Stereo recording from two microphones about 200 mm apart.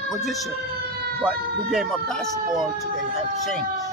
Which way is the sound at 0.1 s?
Centre (ahead or behind).